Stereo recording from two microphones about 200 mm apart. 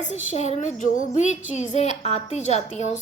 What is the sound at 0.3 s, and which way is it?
A woman's voice, 35° left (ahead or behind).